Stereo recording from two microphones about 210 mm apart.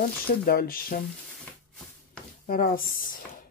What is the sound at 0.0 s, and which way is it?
Speech, 45° left (ahead or behind).